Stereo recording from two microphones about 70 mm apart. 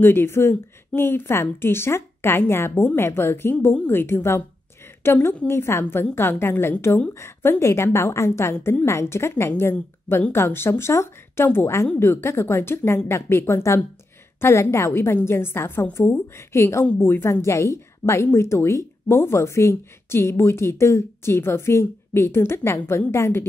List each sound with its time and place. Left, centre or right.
0.0 s speech: left
4.8 s a sound: left
5.5 s speech: left